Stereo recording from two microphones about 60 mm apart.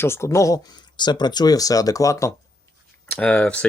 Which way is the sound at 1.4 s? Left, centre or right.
Left.